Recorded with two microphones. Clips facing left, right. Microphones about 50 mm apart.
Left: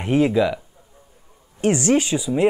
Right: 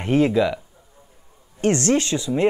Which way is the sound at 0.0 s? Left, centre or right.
Centre.